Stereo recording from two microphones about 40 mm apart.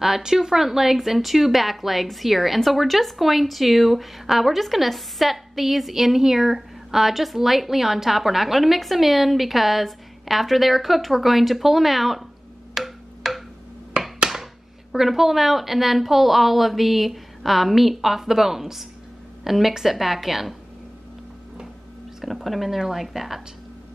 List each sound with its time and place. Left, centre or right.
0.0 s speech: centre
12.7 s wood block: centre
14.0 s a sound: centre
14.3 s a woman's voice: centre
22.2 s speech: centre